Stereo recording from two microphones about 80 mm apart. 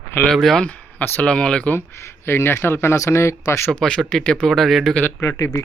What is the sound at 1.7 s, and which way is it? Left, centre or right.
Speech, left.